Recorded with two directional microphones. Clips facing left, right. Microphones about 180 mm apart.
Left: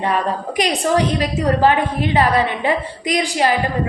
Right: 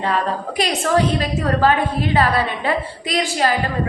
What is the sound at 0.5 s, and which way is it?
A woman's voice, 15° left (ahead or behind).